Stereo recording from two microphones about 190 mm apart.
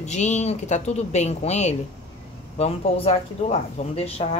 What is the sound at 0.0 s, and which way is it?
Speech, 35° left (ahead or behind).